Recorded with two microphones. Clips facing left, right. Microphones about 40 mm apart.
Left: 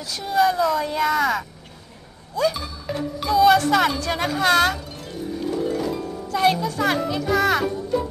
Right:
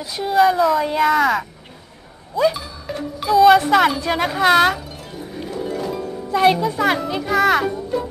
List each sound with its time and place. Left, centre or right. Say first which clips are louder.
0.0 s speech: right 4 dB; centre
2.5 s music: even; centre
3.5 s speech: right 4 dB; centre
4.0 s music: right 4 dB; centre
6.2 s a child's voice: right 4 dB; centre